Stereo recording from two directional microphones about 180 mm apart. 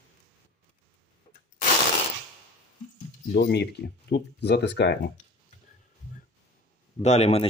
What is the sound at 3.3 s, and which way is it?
Speech, 65° left (ahead or behind).